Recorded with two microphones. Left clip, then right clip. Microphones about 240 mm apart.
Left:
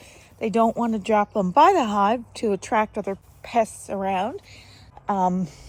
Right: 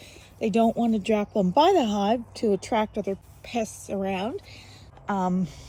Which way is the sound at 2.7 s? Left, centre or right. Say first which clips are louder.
Left 5 dB; left.